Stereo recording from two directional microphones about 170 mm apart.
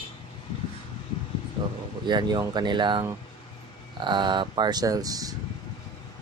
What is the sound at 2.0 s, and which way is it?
Speech, 25° right (ahead or behind).